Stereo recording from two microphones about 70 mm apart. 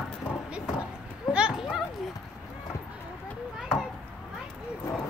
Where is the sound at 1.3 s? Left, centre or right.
Centre.